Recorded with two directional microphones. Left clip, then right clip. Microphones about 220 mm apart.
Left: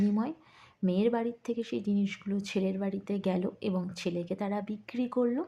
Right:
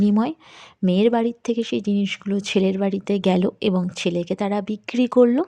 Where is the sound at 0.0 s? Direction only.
40° right (ahead or behind).